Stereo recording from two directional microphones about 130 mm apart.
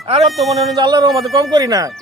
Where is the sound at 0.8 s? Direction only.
35° right (ahead or behind).